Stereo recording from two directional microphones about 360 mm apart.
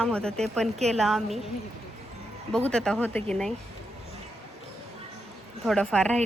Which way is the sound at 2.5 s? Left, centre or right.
Centre.